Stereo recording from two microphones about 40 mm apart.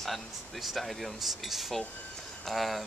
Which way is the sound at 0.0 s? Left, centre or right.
Centre.